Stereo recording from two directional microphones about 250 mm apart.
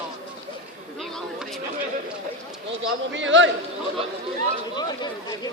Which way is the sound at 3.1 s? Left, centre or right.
Right.